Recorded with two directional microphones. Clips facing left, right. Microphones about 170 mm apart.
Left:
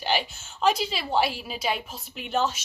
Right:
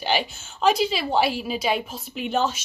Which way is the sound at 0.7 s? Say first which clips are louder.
Right 4 dB; 5° right (ahead or behind).